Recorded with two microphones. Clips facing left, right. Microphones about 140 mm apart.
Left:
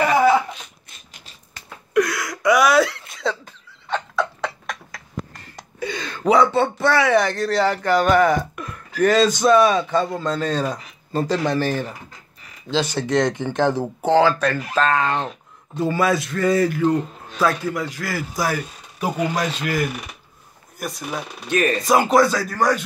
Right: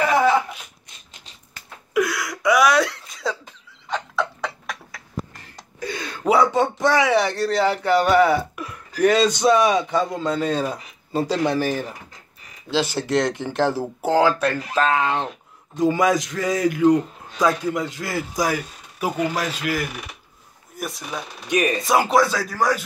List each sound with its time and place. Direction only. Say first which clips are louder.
0.5 s a sound: left 2 dB; 10° right (ahead or behind)
2.0 s throat clearing: left 2 dB; centre (ahead or behind)
3.9 s tick-tock: left 2 dB; centre (ahead or behind)
5.9 s speech: left 2 dB; 10° right (ahead or behind)
21.5 s speech: left 1 dB; 15° right (ahead or behind)
21.8 s speech: left 3 dB; centre (ahead or behind)